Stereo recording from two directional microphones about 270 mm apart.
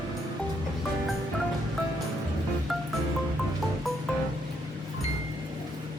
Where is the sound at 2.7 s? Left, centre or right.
Centre.